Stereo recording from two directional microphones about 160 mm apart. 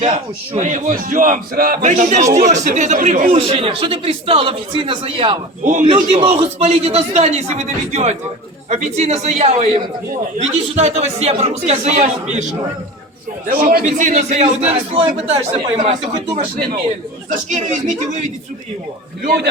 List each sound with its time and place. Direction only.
0.5 s a man's voice: 50° right (ahead or behind)
1.9 s speech: 50° right (ahead or behind)
3.3 s speech: 35° right (ahead or behind)
5.6 s speech: 55° right (ahead or behind)
5.9 s speech: 35° right (ahead or behind)
13.5 s speech: 65° right (ahead or behind); by 16.2 s 50° right (ahead or behind)
17.2 s speech: 55° right (ahead or behind)